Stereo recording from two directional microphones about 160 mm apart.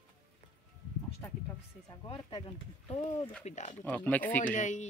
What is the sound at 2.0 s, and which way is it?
Speech, 35° left (ahead or behind).